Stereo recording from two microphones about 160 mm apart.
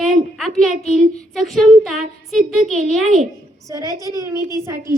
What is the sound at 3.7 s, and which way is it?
A woman's voice, 20° right (ahead or behind).